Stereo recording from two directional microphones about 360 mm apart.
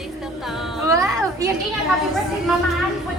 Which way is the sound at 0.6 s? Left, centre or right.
Centre.